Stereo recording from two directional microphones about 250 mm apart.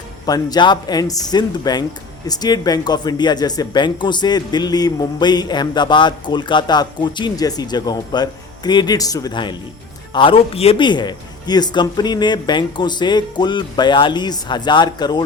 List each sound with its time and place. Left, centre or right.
0.3 s speech: centre